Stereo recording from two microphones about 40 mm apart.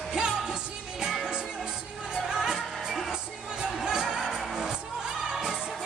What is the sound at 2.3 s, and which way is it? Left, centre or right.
Music, centre.